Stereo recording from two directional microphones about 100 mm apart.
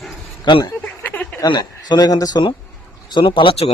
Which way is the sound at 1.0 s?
15° left (ahead or behind).